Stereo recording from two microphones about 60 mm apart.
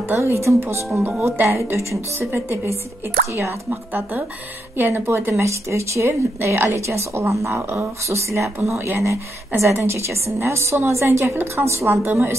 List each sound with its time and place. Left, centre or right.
0.1 s speech: right
11.9 s speech: right